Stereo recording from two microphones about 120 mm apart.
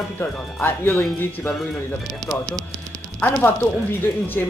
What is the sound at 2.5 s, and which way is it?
Music, 30° right (ahead or behind).